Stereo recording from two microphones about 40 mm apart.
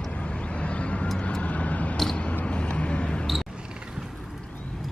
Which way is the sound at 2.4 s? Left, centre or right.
Left.